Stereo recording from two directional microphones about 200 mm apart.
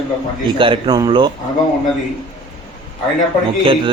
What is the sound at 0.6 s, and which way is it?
Speech, 25° right (ahead or behind).